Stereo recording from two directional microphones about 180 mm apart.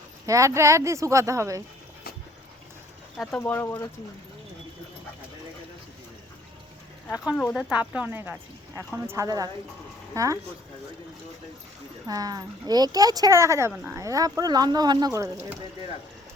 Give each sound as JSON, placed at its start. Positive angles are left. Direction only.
{"t": 0.3, "sound": "speech", "side_deg": -15}
{"t": 3.2, "sound": "speech", "side_deg": 5}
{"t": 7.3, "sound": "speech", "side_deg": 5}
{"t": 7.7, "sound": "speech", "side_deg": -10}
{"t": 12.0, "sound": "speech", "side_deg": -20}